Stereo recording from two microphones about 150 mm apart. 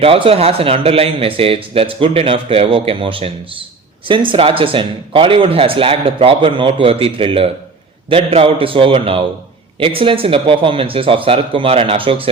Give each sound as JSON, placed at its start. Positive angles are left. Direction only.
{"t": 0.0, "sound": "speech", "side_deg": -40}